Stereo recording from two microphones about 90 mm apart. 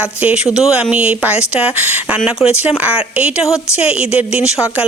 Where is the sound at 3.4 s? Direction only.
35° left (ahead or behind).